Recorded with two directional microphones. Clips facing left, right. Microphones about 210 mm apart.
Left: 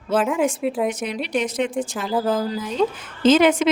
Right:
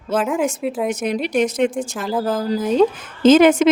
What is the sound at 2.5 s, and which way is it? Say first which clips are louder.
A woman's voice: right 6 dB; 45° right (ahead or behind).